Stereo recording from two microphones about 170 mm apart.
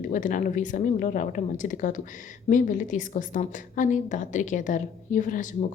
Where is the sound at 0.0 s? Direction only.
50° left (ahead or behind).